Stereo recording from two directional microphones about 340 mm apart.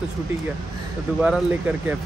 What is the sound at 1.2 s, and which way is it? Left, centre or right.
Speech, centre.